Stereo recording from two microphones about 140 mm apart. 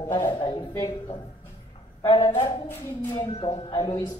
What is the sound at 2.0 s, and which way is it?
Speech, 30° left (ahead or behind).